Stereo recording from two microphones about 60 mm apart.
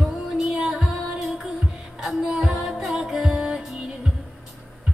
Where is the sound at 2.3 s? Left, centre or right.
Centre.